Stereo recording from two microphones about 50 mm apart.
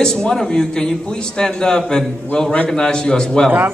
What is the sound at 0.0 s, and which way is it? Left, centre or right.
A man's voice, centre.